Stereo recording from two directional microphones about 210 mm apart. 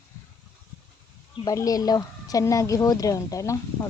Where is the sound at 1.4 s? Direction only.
15° left (ahead or behind).